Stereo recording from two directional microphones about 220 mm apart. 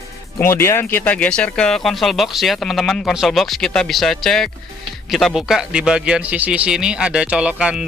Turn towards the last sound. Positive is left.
turn(degrees=-5)  # may be behind; listen again after turning